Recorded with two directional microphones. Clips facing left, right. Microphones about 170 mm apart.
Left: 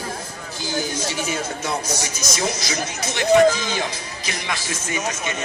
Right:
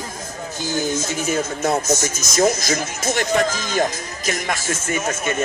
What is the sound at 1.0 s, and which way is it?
Speech, 45° right (ahead or behind).